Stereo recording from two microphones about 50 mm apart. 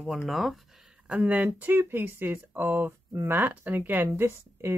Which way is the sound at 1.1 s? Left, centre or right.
Right.